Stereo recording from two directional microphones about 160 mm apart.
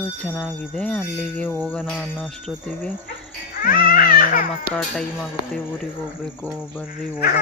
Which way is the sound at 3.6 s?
60° left (ahead or behind).